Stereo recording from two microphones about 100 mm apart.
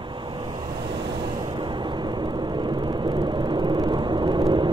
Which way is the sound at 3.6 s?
50° right (ahead or behind).